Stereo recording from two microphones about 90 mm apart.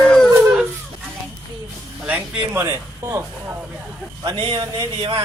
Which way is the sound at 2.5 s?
35° right (ahead or behind).